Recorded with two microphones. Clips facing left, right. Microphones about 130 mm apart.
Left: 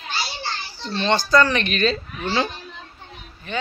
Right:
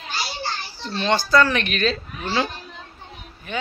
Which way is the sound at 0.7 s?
5° right (ahead or behind).